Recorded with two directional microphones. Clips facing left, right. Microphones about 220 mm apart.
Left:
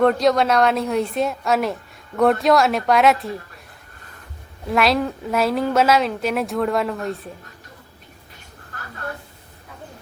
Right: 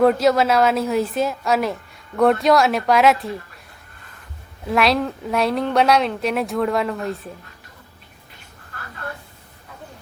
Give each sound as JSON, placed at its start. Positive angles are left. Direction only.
{"t": 0.0, "sound": "a woman's voice", "side_deg": -5}
{"t": 4.6, "sound": "a woman's voice", "side_deg": 0}